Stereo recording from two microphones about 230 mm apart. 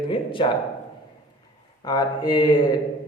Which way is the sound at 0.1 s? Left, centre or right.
Left.